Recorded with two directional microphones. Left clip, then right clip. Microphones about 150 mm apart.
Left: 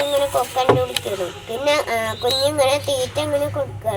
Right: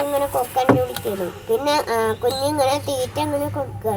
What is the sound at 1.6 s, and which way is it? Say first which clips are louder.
Speech: left 3 dB; 35° right (ahead or behind).